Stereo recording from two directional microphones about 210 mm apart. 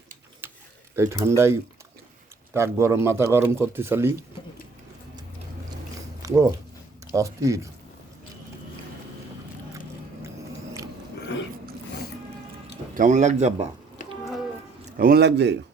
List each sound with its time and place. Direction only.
0.4 s typing: 10° right (ahead or behind)
0.9 s a man's voice: 15° right (ahead or behind)
6.2 s a man's voice: 15° right (ahead or behind)
12.9 s a man's voice: 35° right (ahead or behind)
14.9 s a man's voice: 45° right (ahead or behind)